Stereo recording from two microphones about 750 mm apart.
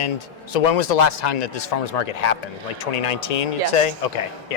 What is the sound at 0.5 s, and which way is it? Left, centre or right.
Speech, left.